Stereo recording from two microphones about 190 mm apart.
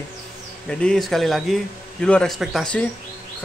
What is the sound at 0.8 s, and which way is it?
A man's voice, centre (ahead or behind).